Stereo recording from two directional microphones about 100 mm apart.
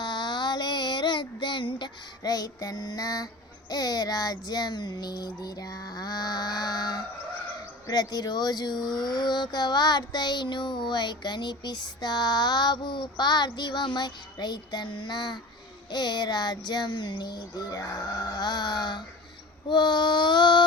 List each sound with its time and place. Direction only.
0.0 s child singing: 45° left (ahead or behind)